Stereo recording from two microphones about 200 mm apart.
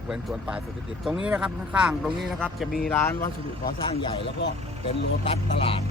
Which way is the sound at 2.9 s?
15° left (ahead or behind).